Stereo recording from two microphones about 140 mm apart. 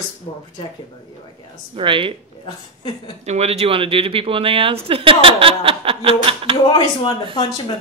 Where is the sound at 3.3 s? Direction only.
50° right (ahead or behind).